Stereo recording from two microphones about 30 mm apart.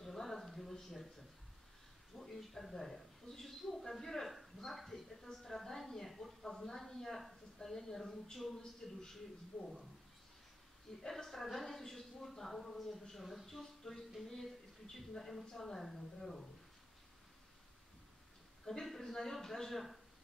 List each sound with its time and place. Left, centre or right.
0.0 s a sound: centre
2.1 s a woman's voice: centre
11.0 s a woman's voice: centre
18.7 s a woman's voice: centre